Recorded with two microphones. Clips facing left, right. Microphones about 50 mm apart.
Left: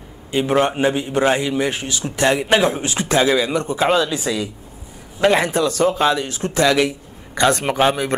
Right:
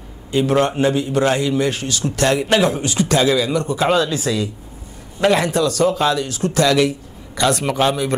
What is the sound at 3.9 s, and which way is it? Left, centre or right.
A man's voice, centre.